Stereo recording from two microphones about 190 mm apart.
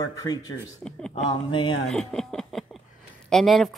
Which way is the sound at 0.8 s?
5° left (ahead or behind).